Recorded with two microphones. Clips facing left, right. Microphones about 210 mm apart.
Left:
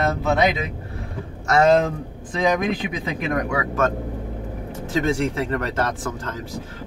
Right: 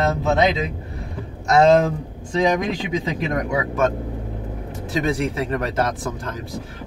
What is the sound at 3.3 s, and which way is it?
Speech, 20° right (ahead or behind).